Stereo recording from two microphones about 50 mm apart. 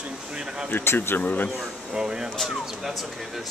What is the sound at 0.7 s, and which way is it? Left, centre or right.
Speech, left.